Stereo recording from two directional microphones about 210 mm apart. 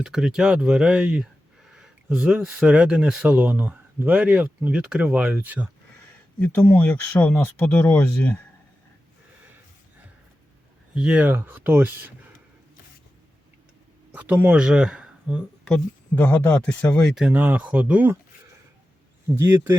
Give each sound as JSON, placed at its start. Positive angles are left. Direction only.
{"t": 0.0, "sound": "speech", "side_deg": 0}
{"t": 6.4, "sound": "speech", "side_deg": 10}
{"t": 10.9, "sound": "speech", "side_deg": -5}
{"t": 14.1, "sound": "speech", "side_deg": -5}
{"t": 19.4, "sound": "speech", "side_deg": -10}